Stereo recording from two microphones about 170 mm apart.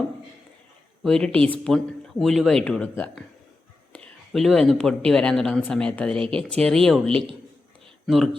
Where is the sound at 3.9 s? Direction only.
5° left (ahead or behind).